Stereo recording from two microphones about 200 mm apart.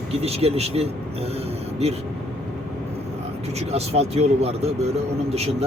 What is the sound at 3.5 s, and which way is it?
Speech, 30° right (ahead or behind).